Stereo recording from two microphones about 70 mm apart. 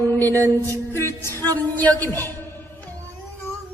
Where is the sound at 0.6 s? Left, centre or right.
Left.